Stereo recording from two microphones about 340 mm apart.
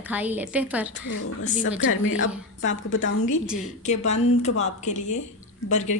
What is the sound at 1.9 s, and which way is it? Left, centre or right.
A woman's voice, left.